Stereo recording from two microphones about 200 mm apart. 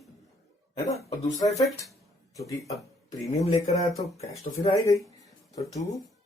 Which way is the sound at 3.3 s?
30° left (ahead or behind).